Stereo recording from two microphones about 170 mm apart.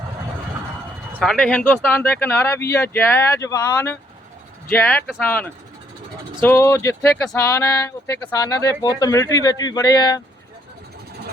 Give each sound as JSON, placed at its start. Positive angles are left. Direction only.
{"t": 1.2, "sound": "speech", "side_deg": 5}